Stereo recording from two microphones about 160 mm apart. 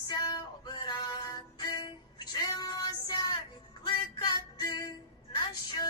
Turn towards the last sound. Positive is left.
turn(degrees=25)  # may be behind; listen again after turning